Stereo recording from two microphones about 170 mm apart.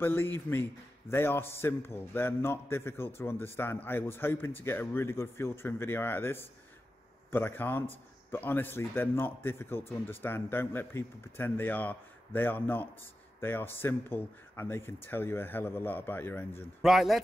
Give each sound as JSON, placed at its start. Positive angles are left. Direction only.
{"t": 0.0, "sound": "speech", "side_deg": 15}
{"t": 16.8, "sound": "speech", "side_deg": 0}